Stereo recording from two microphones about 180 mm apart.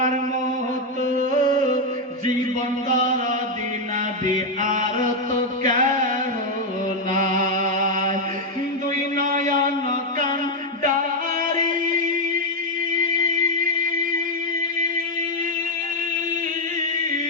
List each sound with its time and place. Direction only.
1.1 s music: 45° right (ahead or behind)
4.3 s mantra: 45° right (ahead or behind)
5.6 s chant: 45° right (ahead or behind)
7.1 s mantra: 50° right (ahead or behind)
9.1 s a sound: 50° right (ahead or behind)
11.5 s music: 50° right (ahead or behind)